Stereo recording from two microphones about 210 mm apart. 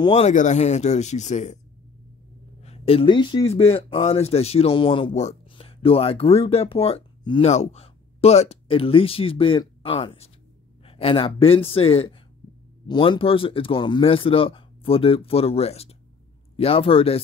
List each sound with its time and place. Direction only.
0.0 s speech: 30° left (ahead or behind)
2.6 s speech: 30° left (ahead or behind)